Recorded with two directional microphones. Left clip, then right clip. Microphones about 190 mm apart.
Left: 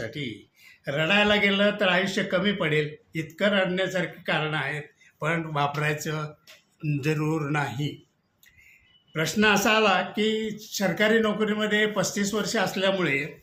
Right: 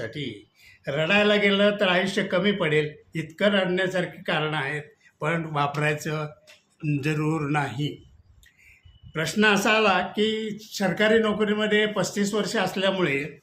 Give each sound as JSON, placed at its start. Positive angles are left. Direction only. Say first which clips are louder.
{"t": 0.0, "sound": "a man's voice", "louder": "right 1 dB", "side_deg": -10}
{"t": 9.1, "sound": "a man's voice", "louder": "right 1 dB", "side_deg": -10}